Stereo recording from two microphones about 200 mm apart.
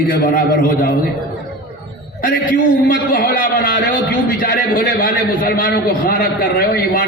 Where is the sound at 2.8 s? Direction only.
45° left (ahead or behind).